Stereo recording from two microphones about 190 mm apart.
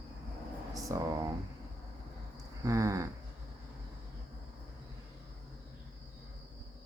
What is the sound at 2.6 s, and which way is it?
Speech, 15° right (ahead or behind).